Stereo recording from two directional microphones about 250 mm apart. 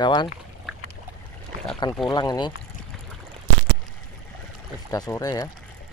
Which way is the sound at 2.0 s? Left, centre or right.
Centre.